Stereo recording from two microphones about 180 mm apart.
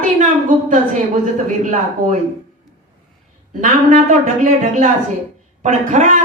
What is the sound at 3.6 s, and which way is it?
A woman's voice, 40° right (ahead or behind).